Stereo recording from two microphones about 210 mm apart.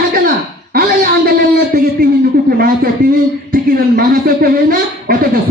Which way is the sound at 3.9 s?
45° right (ahead or behind).